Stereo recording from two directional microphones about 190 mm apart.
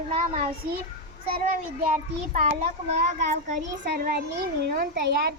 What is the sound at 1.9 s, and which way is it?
A child's voice, 45° right (ahead or behind).